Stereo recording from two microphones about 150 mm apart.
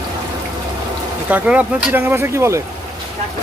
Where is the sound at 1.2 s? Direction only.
10° right (ahead or behind).